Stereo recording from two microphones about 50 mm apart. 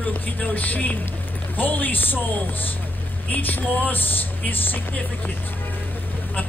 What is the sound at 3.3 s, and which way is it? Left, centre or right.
Speech, left.